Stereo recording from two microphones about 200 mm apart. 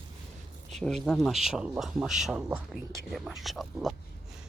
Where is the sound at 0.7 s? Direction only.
Centre (ahead or behind).